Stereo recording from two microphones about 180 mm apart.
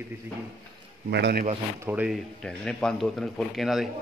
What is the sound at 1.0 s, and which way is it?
Speech, 70° right (ahead or behind).